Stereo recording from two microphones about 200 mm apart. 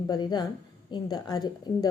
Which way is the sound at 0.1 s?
20° left (ahead or behind).